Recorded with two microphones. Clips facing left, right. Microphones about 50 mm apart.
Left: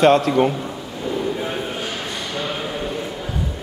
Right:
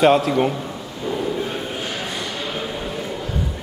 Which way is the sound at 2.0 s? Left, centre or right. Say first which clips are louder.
Left 1 dB; centre.